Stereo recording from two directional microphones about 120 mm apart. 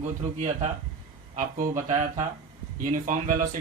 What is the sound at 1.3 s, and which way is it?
Speech, 90° right.